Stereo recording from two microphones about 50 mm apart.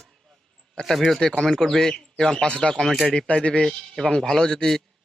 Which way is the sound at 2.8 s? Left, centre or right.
Centre.